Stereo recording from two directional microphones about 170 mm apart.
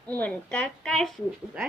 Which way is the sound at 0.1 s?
10° left (ahead or behind).